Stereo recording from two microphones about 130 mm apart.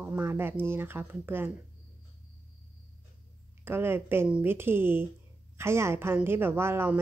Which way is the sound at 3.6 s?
15° right (ahead or behind).